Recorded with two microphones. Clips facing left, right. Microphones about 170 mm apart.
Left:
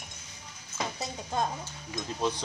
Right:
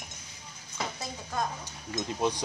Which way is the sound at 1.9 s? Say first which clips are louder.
Right 2 dB; 15° right (ahead or behind).